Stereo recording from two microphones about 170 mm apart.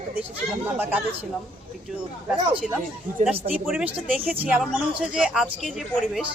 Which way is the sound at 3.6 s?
5° right (ahead or behind).